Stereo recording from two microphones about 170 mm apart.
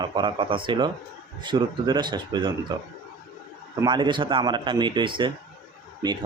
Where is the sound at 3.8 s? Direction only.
25° right (ahead or behind).